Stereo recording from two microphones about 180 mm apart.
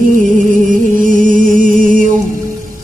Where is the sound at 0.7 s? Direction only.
45° right (ahead or behind).